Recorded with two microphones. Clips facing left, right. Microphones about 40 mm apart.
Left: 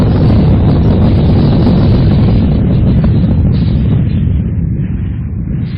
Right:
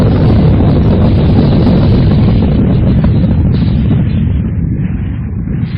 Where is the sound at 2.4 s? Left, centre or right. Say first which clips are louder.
Right 1 dB; centre.